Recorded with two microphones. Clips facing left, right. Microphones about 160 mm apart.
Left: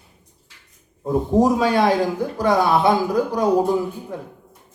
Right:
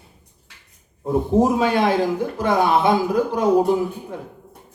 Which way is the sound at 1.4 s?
40° left (ahead or behind).